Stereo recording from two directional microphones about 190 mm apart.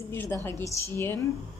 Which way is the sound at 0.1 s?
10° left (ahead or behind).